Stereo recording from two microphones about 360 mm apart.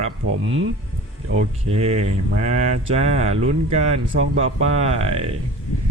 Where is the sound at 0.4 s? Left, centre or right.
Right.